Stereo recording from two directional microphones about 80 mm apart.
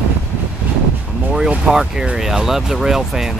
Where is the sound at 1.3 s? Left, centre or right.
Centre.